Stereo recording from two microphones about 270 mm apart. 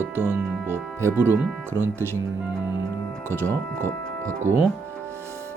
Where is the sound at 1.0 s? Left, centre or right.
Centre.